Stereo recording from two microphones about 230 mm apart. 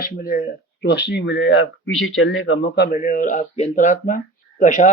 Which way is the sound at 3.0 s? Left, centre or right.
Left.